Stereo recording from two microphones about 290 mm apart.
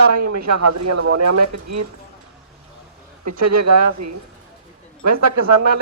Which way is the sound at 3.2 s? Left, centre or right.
Right.